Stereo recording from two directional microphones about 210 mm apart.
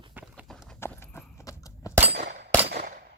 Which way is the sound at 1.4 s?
15° left (ahead or behind).